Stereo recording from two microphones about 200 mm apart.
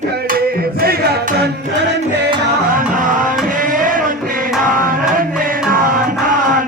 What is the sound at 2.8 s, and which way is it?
Music, 40° right (ahead or behind).